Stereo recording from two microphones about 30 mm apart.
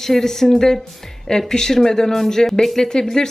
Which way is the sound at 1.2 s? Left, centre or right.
Left.